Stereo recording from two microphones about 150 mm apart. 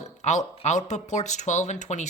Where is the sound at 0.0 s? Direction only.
50° left (ahead or behind).